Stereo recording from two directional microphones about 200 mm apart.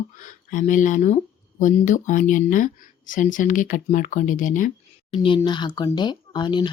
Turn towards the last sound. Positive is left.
turn(degrees=20)  # may be behind; listen again after turning